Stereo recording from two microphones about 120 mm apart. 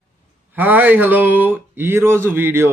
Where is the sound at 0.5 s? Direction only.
15° right (ahead or behind).